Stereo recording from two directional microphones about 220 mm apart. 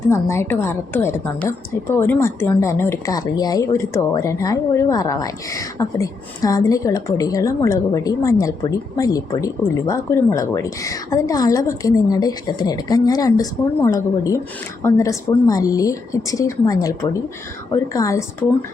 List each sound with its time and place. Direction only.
0.1 s a woman's voice: 10° left (ahead or behind)